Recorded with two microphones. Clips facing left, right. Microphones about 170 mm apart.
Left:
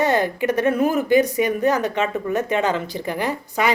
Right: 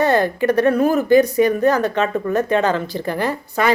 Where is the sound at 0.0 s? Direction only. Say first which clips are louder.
Right 3 dB; 15° left (ahead or behind).